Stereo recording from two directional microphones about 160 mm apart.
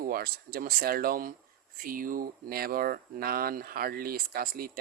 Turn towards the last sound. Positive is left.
turn(degrees=-65)  # may be behind; listen again after turning